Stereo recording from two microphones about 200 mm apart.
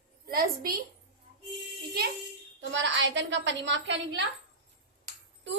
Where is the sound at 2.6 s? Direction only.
65° right (ahead or behind).